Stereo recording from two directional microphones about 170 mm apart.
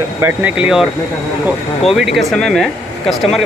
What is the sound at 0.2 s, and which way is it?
Speech, 10° right (ahead or behind).